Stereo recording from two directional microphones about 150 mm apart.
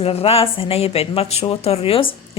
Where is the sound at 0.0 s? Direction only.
40° left (ahead or behind).